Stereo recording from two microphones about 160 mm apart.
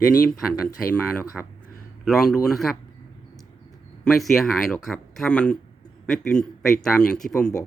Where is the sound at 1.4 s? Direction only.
5° left (ahead or behind).